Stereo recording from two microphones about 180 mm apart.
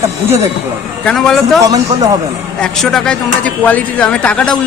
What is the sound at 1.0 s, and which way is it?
Speech, centre (ahead or behind).